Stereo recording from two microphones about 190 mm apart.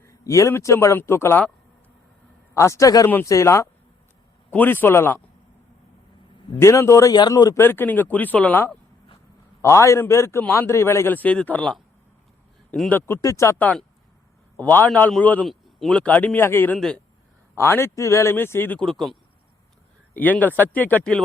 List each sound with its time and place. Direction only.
0.0 s a man's voice: 15° left (ahead or behind)
2.6 s a man's voice: 15° left (ahead or behind)
6.6 s a man's voice: 15° left (ahead or behind)
13.1 s a man's voice: 15° left (ahead or behind)
20.1 s a man's voice: 10° left (ahead or behind)